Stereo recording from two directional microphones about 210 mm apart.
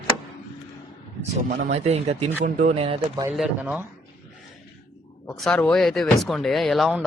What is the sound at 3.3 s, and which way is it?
Speech, 5° right (ahead or behind).